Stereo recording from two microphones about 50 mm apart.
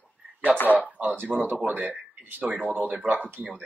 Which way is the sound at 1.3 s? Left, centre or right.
Right.